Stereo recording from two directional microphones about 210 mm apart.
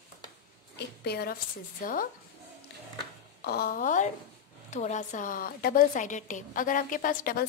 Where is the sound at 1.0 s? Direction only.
50° left (ahead or behind).